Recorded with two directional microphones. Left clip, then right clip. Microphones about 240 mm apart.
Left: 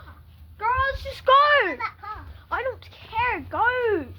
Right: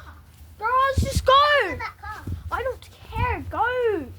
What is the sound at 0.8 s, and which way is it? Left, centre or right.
A child's voice, right.